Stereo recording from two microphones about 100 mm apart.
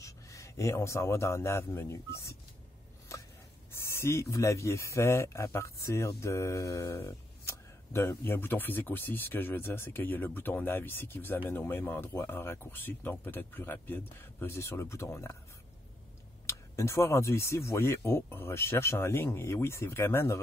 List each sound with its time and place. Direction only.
0.0 s a man's voice: 30° left (ahead or behind)
3.1 s a sound: 30° left (ahead or behind)
3.9 s speech: 30° left (ahead or behind)
16.4 s speech: 30° left (ahead or behind)